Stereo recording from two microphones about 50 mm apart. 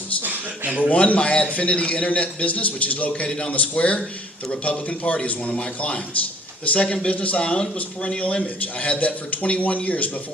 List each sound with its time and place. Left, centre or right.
0.2 s a sound: right
0.8 s a man's voice: left
3.1 s a man's voice: centre